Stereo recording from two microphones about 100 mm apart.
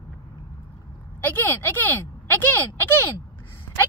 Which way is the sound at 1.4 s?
20° left (ahead or behind).